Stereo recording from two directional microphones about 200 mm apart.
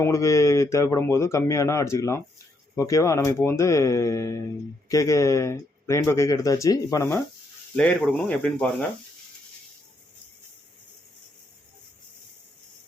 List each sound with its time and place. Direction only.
0.0 s speech: 15° left (ahead or behind)